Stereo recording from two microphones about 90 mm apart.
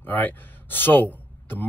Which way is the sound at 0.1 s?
20° left (ahead or behind).